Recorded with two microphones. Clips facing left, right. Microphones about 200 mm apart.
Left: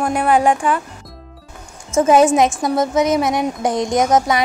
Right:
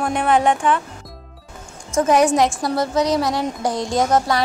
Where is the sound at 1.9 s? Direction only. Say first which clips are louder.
Left 3 dB; 25° left (ahead or behind).